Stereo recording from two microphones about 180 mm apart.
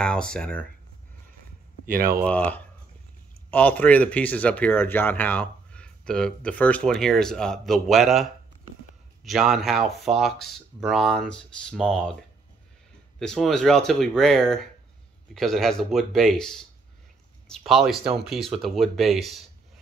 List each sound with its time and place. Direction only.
0.0 s speech: 5° left (ahead or behind)
1.9 s speech: 55° right (ahead or behind)
2.2 s speech: 5° left (ahead or behind)
13.2 s speech: 5° left (ahead or behind)